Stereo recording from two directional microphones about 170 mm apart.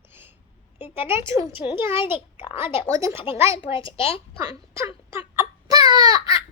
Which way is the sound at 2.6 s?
30° left (ahead or behind).